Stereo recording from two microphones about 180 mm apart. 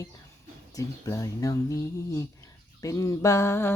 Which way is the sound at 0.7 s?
15° left (ahead or behind).